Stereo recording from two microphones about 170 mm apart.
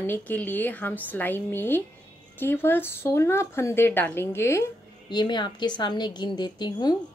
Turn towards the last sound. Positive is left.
turn(degrees=25)  # may be behind; listen again after turning